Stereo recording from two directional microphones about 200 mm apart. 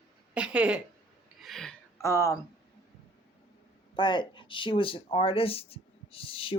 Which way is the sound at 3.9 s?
25° left (ahead or behind).